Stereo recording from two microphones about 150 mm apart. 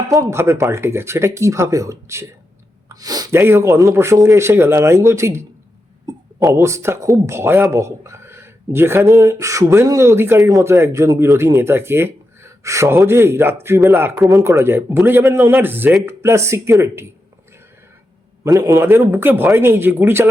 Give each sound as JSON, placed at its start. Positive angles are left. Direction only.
{"t": 0.1, "sound": "speech", "side_deg": -20}
{"t": 2.9, "sound": "a sound", "side_deg": -25}
{"t": 3.3, "sound": "speech", "side_deg": -15}
{"t": 18.4, "sound": "speech", "side_deg": -25}